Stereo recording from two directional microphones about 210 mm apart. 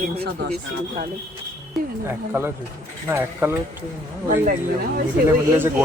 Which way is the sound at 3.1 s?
10° right (ahead or behind).